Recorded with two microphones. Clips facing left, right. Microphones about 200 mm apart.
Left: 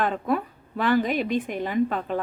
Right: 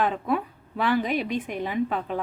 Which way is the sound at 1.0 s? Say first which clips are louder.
Left 2 dB; 45° left (ahead or behind).